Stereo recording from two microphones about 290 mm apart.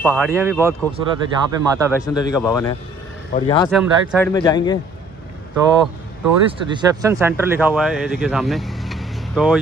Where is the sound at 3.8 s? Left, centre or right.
Centre.